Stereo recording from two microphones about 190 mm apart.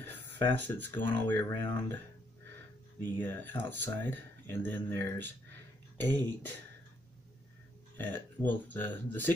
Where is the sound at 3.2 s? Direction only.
10° left (ahead or behind).